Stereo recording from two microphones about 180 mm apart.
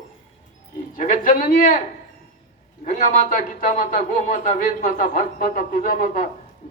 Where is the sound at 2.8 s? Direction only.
45° left (ahead or behind).